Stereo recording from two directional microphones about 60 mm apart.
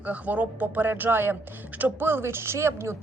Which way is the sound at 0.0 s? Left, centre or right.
Right.